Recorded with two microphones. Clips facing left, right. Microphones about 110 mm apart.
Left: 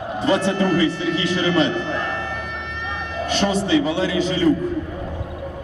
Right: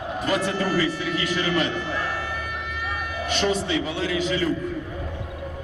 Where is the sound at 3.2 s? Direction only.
30° left (ahead or behind).